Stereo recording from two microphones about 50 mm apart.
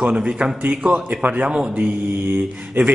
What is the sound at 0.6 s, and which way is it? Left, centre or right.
A man's voice, right.